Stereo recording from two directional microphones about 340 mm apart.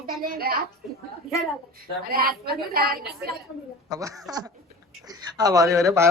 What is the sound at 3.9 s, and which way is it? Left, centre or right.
Speech, centre.